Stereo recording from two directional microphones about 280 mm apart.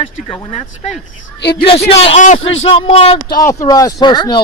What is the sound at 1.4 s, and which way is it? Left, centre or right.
Speech, left.